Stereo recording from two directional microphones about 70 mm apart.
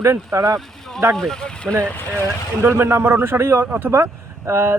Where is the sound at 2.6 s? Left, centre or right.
Right.